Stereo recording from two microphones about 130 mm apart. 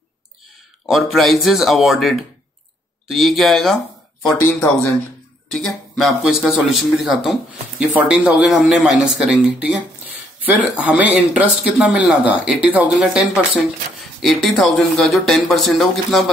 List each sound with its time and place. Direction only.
0.8 s speech: centre (ahead or behind)
4.5 s speech: 20° left (ahead or behind)
5.6 s speech: centre (ahead or behind)